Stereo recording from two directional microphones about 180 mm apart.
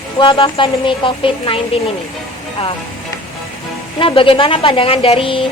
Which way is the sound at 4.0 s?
30° left (ahead or behind).